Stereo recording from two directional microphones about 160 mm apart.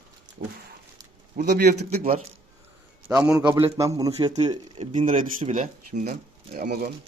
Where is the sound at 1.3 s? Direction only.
60° right (ahead or behind).